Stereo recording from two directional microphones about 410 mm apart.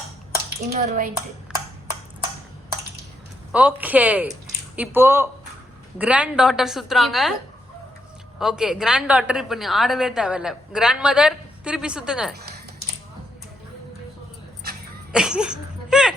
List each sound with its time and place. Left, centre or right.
0.7 s speech: right
3.5 s a woman's voice: centre
8.4 s a woman's voice: centre
15.1 s a sound: centre